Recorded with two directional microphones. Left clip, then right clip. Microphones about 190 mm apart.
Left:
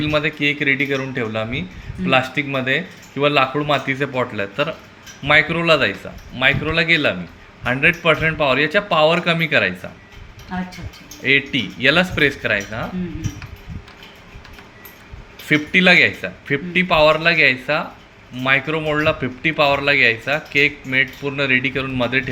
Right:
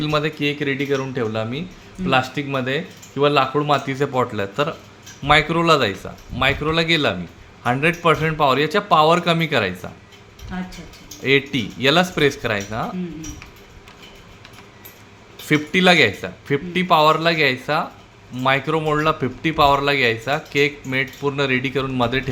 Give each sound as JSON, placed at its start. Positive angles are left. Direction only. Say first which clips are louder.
{"t": 0.0, "sound": "speech", "louder": "left 2 dB", "side_deg": -25}
{"t": 11.2, "sound": "speech", "louder": "left 2 dB", "side_deg": -30}
{"t": 15.4, "sound": "speech", "louder": "left 2 dB", "side_deg": -25}